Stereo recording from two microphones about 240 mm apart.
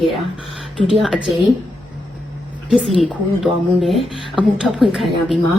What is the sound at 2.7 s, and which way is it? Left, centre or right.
Speech, centre.